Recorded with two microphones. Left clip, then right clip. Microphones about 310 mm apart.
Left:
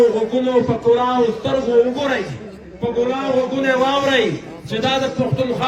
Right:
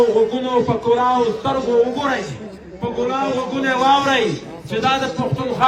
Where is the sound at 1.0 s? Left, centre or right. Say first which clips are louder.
Even; right.